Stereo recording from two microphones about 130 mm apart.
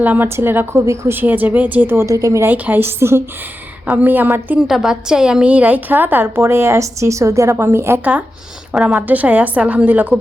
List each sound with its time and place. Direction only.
0.0 s a woman's voice: 15° right (ahead or behind)
4.6 s a woman's voice: centre (ahead or behind)